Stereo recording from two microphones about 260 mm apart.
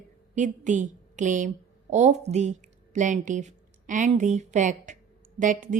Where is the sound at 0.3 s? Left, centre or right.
Right.